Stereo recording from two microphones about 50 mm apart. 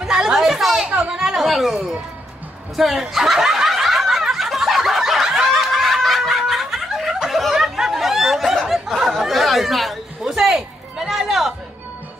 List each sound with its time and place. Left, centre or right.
0.0 s a sound: centre
0.8 s speech: right
1.1 s chatter: centre
2.7 s snicker: centre
8.6 s chatter: centre
10.3 s a sound: centre